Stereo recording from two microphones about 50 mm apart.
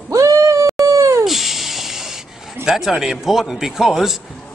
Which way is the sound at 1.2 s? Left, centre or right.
Centre.